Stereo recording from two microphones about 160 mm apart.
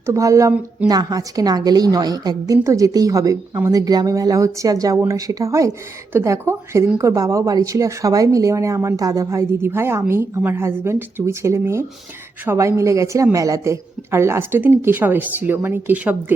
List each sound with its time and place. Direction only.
0.0 s a woman's voice: 20° right (ahead or behind)